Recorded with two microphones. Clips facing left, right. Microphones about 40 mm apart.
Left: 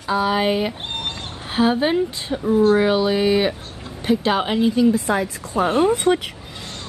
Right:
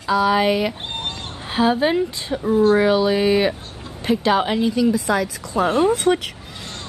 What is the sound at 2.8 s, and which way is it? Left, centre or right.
A woman's voice, centre.